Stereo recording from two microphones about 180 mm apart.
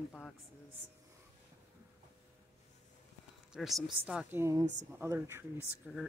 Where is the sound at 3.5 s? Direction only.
Centre (ahead or behind).